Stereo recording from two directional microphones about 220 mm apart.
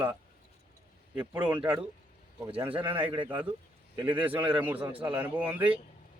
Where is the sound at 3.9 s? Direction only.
10° right (ahead or behind).